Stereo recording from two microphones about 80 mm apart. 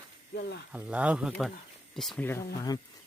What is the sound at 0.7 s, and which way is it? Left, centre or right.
Speech, centre.